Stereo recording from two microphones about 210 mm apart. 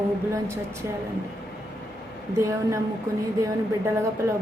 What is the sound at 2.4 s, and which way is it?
Speech, 15° right (ahead or behind).